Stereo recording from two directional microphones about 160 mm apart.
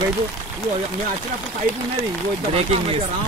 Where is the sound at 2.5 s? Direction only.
40° right (ahead or behind).